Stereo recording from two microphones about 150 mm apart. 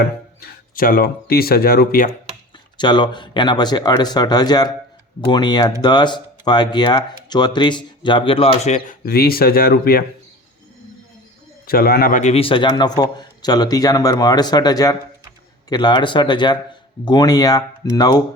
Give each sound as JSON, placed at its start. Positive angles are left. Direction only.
{"t": 0.0, "sound": "speech", "side_deg": 80}
{"t": 2.7, "sound": "speech", "side_deg": 30}
{"t": 9.0, "sound": "speech", "side_deg": 90}
{"t": 11.6, "sound": "a man's voice", "side_deg": 90}
{"t": 12.2, "sound": "speech", "side_deg": 40}